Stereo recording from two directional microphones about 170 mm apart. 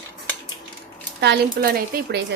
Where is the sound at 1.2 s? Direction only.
75° right (ahead or behind).